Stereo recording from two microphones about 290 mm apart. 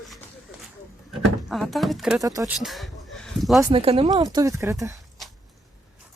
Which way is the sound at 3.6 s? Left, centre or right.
Centre.